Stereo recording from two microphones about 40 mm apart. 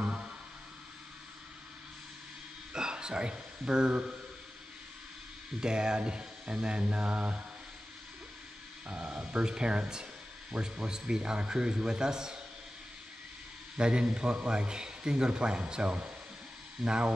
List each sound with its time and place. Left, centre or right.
2.7 s a sound: centre
5.6 s a man's voice: right
8.8 s a man's voice: right
10.5 s speech: centre
10.9 s a man's voice: centre
13.7 s a man's voice: right